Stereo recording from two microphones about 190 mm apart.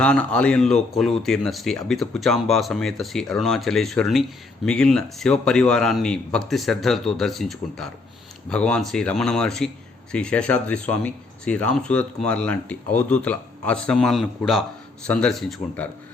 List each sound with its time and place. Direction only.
0.0 s speech: 5° left (ahead or behind)